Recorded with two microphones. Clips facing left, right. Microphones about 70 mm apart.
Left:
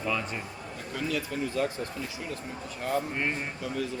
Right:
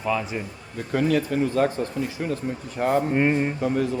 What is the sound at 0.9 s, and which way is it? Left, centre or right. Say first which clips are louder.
Speech: right 10 dB; right.